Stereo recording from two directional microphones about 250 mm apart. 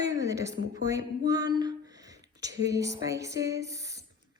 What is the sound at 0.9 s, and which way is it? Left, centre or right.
Speech, centre.